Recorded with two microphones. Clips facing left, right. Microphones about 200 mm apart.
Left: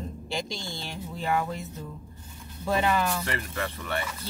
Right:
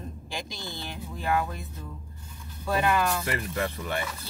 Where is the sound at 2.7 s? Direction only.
20° left (ahead or behind).